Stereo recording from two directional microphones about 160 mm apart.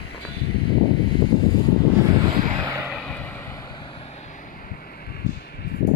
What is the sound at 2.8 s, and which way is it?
Vehicle, 5° left (ahead or behind).